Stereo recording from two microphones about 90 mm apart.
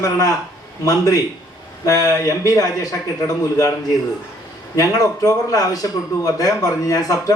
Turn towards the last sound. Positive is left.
turn(degrees=40)  # may be behind; listen again after turning